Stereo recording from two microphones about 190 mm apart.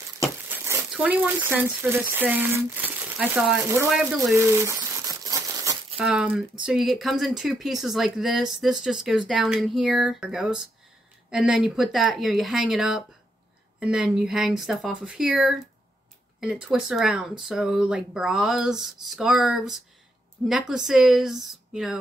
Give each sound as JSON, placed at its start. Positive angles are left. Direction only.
{"t": 0.9, "sound": "speech", "side_deg": -10}
{"t": 4.4, "sound": "crumpling", "side_deg": -15}
{"t": 5.9, "sound": "speech", "side_deg": -5}